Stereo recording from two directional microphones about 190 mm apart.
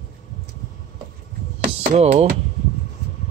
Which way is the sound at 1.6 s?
40° right (ahead or behind).